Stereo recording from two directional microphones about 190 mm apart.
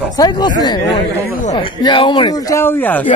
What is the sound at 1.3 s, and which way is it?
Speech, 40° left (ahead or behind).